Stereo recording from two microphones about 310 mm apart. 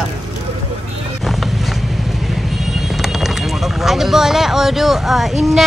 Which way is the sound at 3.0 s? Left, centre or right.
Centre.